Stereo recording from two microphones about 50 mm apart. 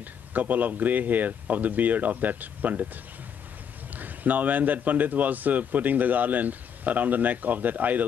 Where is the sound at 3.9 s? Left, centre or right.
Right.